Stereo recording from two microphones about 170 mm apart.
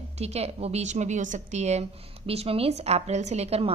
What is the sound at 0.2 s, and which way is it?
A woman's voice, 40° right (ahead or behind).